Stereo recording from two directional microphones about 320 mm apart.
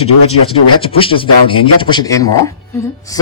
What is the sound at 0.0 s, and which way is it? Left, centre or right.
Speech, centre.